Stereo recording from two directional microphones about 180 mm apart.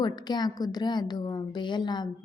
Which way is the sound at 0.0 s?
25° left (ahead or behind).